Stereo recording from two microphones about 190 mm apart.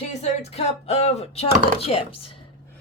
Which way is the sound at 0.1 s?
35° left (ahead or behind).